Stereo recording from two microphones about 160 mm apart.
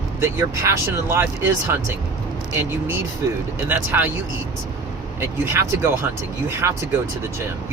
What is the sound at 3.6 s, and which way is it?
Speech, 10° right (ahead or behind).